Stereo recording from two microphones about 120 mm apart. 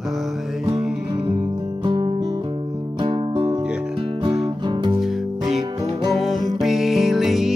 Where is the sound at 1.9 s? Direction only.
40° right (ahead or behind).